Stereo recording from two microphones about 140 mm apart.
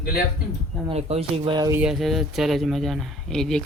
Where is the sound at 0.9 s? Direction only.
50° right (ahead or behind).